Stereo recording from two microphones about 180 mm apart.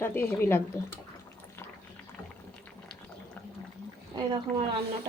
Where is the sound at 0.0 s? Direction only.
10° left (ahead or behind).